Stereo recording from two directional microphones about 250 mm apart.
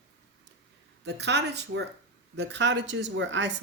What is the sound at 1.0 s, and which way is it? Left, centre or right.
Speech, right.